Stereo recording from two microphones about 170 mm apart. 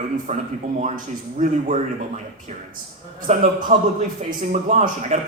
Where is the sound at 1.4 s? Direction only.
50° right (ahead or behind).